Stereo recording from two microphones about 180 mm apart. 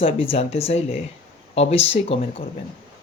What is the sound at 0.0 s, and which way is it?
Speech, 30° left (ahead or behind).